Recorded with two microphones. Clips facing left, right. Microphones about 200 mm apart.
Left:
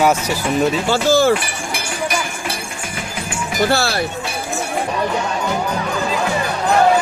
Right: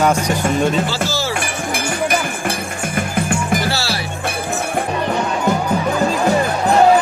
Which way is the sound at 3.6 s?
50° left (ahead or behind).